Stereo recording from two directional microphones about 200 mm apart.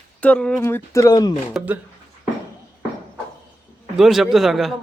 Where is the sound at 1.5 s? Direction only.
10° right (ahead or behind).